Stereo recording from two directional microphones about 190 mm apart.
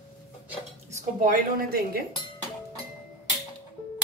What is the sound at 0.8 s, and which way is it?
A woman's voice, 45° right (ahead or behind).